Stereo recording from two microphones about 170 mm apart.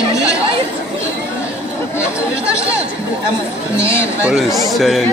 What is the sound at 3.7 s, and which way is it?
Speech, 15° left (ahead or behind).